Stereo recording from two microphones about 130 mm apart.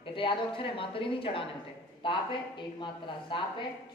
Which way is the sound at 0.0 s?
40° left (ahead or behind).